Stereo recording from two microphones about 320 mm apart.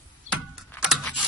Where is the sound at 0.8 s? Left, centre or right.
Centre.